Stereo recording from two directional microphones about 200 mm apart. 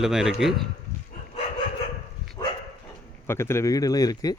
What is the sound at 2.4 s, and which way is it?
Dog, 15° left (ahead or behind).